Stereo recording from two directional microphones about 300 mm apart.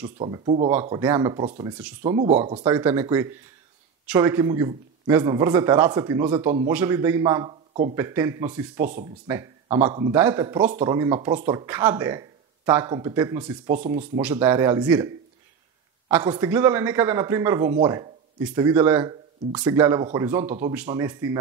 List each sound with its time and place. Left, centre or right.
0.2 s speech: centre
0.7 s speech: centre
8.8 s speech: right
9.3 s speech: centre